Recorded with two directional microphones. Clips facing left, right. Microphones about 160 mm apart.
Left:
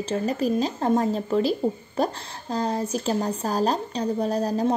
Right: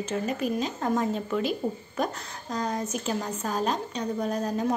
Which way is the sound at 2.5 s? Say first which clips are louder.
Left 4 dB; 30° left (ahead or behind).